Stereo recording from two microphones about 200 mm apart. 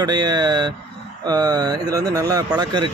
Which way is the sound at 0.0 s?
20° right (ahead or behind).